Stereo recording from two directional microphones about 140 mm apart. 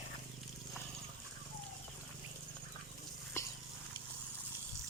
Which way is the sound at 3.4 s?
20° left (ahead or behind).